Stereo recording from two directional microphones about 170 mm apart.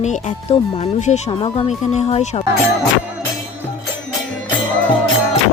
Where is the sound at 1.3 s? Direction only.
30° left (ahead or behind).